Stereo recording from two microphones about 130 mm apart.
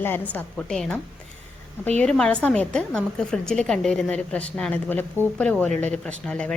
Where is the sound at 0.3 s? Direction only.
5° left (ahead or behind).